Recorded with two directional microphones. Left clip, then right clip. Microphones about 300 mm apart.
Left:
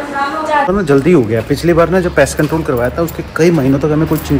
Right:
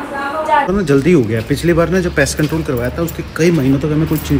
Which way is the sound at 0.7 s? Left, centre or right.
Centre.